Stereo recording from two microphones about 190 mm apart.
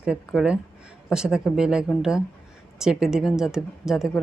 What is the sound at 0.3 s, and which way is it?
A woman's voice, 5° right (ahead or behind).